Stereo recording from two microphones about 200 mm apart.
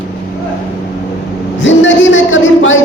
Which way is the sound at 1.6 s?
70° left (ahead or behind).